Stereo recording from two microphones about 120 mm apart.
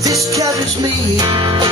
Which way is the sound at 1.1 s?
40° right (ahead or behind).